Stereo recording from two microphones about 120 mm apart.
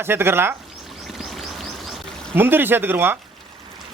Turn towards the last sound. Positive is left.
turn(degrees=-20)  # may be behind; listen again after turning